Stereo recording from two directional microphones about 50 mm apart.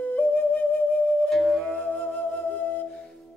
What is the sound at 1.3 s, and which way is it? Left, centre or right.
Music, centre.